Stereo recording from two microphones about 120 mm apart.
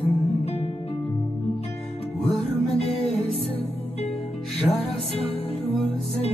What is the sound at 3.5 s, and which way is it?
Music, 55° left (ahead or behind).